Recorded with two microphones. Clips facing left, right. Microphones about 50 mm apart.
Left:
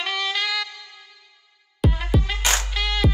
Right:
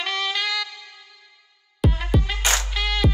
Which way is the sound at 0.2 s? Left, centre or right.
Centre.